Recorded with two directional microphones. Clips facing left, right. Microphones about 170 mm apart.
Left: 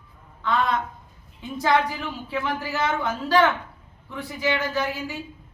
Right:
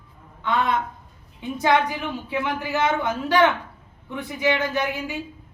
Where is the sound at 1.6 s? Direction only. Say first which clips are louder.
Right 1 dB; 20° right (ahead or behind).